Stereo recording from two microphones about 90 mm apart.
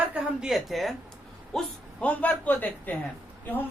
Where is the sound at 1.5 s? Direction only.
15° left (ahead or behind).